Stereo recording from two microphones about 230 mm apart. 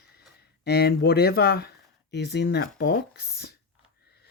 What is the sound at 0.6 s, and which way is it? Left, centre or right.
Speech, left.